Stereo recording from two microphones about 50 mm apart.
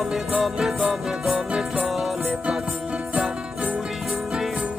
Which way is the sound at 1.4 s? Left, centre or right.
Right.